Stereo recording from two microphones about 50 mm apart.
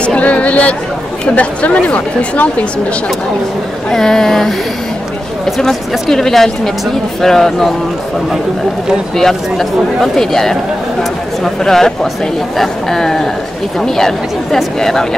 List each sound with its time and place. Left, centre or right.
0.0 s a sound: left
1.3 s a woman's voice: left
3.9 s speech: centre
5.6 s speech: centre
9.1 s speech: centre